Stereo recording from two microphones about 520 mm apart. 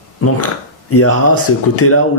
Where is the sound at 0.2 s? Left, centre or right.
Left.